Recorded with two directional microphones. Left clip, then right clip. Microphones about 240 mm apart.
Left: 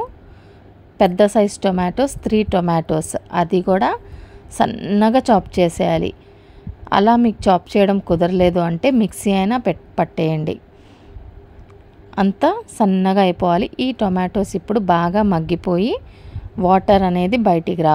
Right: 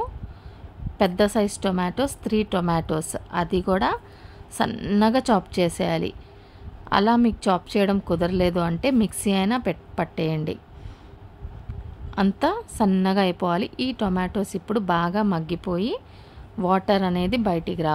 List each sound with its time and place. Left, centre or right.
0.9 s a woman's voice: centre
12.1 s a woman's voice: centre